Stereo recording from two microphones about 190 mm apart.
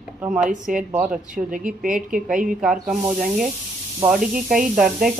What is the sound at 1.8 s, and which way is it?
Speech, 45° right (ahead or behind).